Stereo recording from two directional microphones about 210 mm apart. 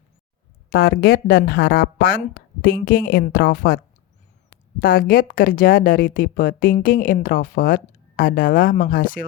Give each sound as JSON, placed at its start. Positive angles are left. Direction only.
{"t": 0.7, "sound": "speech", "side_deg": 45}
{"t": 4.8, "sound": "speech", "side_deg": 45}